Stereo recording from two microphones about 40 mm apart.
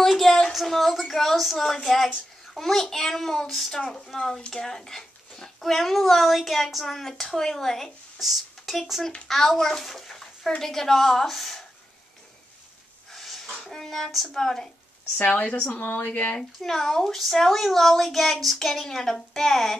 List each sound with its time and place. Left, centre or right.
0.0 s a sound: centre
0.5 s a woman's voice: centre
3.7 s a child's voice: centre
8.2 s a child's voice: centre
13.1 s sneeze: centre
13.6 s a child's voice: centre
15.1 s speech: left
16.3 s a child's voice: centre